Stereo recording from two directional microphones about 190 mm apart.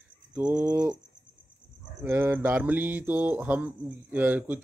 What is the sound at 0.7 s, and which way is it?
Cricket, 20° right (ahead or behind).